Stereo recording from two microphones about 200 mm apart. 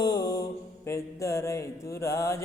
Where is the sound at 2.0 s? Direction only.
15° left (ahead or behind).